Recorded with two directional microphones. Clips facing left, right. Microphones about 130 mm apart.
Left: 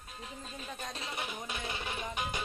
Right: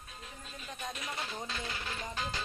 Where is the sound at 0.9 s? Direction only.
25° left (ahead or behind).